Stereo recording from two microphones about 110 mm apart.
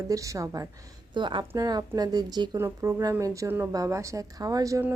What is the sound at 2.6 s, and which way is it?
A woman's voice, 25° right (ahead or behind).